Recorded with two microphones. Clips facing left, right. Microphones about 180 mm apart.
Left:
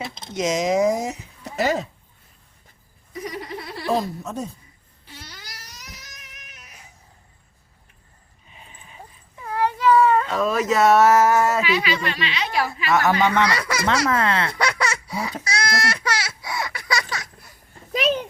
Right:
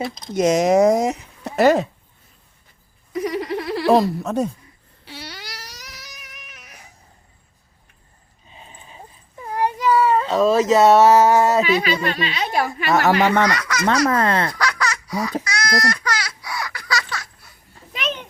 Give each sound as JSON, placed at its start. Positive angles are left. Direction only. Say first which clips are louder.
{"t": 0.3, "sound": "speech", "louder": "right 5 dB", "side_deg": -60}
{"t": 3.1, "sound": "a sound", "louder": "right 8 dB", "side_deg": -90}
{"t": 5.0, "sound": "cat", "louder": "right 7 dB", "side_deg": -80}
{"t": 8.4, "sound": "a sound", "louder": "right 4 dB", "side_deg": -30}
{"t": 9.5, "sound": "cat", "louder": "left 1 dB", "side_deg": -15}
{"t": 10.2, "sound": "speech", "louder": "right 5 dB", "side_deg": -25}
{"t": 11.6, "sound": "a woman's voice", "louder": "right 3 dB", "side_deg": -40}
{"t": 13.0, "sound": "speech", "louder": "right 3 dB", "side_deg": -70}
{"t": 13.6, "sound": "speech", "louder": "even", "side_deg": 30}
{"t": 13.8, "sound": "a woman's voice", "louder": "right 4 dB", "side_deg": -45}
{"t": 14.6, "sound": "baby laughter", "louder": "even", "side_deg": 25}
{"t": 15.4, "sound": "a sound", "louder": "right 2 dB", "side_deg": 25}
{"t": 15.9, "sound": "baby laughter", "louder": "right 1 dB", "side_deg": 25}